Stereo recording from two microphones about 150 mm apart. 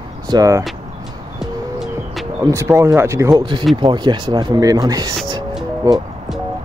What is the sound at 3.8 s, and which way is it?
Speech, 30° right (ahead or behind).